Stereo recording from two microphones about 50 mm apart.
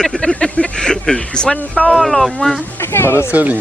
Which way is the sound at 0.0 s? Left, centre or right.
Centre.